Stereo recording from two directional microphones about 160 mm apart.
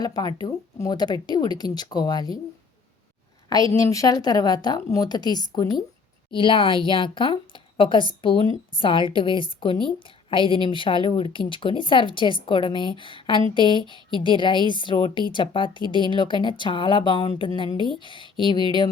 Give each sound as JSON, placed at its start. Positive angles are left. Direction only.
{"t": 0.0, "sound": "a woman's voice", "side_deg": 25}
{"t": 3.5, "sound": "a woman's voice", "side_deg": 20}